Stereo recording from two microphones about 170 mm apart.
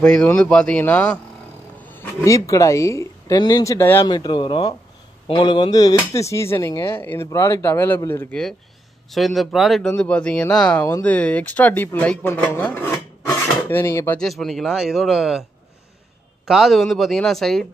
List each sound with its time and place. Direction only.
0.0 s speech: 5° left (ahead or behind)
4.1 s speech: 25° left (ahead or behind)
9.1 s speech: centre (ahead or behind)
16.4 s speech: centre (ahead or behind)